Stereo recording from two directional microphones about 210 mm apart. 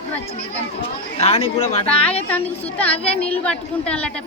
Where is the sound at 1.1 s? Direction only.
25° left (ahead or behind).